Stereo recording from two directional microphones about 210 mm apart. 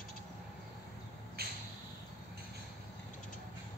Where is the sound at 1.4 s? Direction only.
50° right (ahead or behind).